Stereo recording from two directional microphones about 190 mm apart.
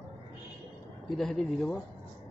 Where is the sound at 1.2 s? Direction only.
Centre (ahead or behind).